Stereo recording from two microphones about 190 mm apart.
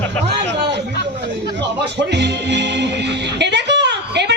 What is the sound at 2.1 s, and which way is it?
Music, 65° right (ahead or behind).